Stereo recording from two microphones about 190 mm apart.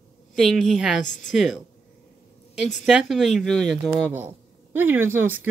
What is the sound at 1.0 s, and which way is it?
Speech, 40° left (ahead or behind).